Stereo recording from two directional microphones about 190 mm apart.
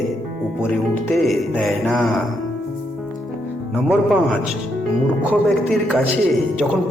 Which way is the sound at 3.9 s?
5° right (ahead or behind).